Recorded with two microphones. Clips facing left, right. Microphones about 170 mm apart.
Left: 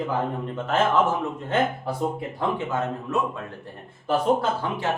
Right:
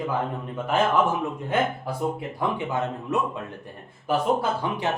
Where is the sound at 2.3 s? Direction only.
15° right (ahead or behind).